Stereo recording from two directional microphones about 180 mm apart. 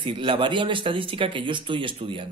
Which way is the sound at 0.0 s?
25° right (ahead or behind).